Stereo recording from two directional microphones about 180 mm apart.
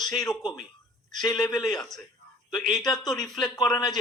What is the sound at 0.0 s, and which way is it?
Speech, centre (ahead or behind).